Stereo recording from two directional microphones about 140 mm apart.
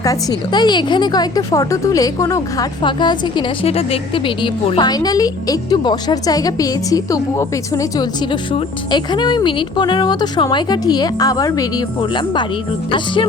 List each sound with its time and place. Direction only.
0.0 s a woman's voice: 25° left (ahead or behind)
4.9 s a woman's voice: 25° left (ahead or behind)
8.3 s a woman's voice: 35° left (ahead or behind)